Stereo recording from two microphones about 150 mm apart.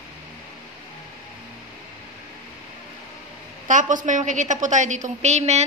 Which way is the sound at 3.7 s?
55° right (ahead or behind).